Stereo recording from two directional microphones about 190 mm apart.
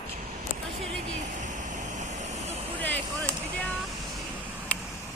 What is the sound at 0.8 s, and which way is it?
Vehicle, 40° right (ahead or behind).